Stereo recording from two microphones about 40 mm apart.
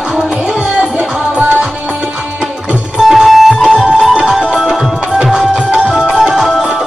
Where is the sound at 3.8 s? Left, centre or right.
Centre.